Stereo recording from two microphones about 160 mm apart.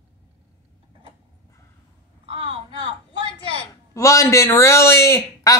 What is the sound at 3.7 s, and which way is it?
A man's voice, 20° left (ahead or behind).